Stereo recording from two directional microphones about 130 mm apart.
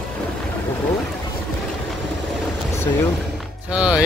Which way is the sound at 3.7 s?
10° right (ahead or behind).